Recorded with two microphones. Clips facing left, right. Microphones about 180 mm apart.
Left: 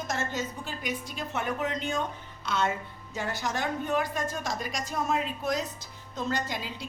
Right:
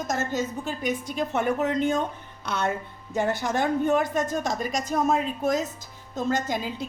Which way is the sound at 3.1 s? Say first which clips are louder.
Right 7 dB; 55° right (ahead or behind).